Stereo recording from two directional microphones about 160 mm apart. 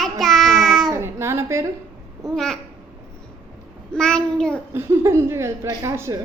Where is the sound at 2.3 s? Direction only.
5° left (ahead or behind).